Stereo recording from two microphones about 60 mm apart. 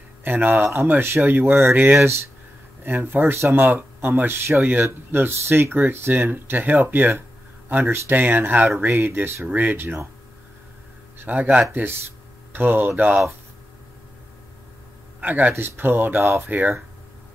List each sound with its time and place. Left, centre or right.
0.2 s speech: right
8.9 s speech: right
11.2 s speech: right
15.1 s speech: right
15.5 s speech: right
16.2 s speech: right
16.4 s speech: right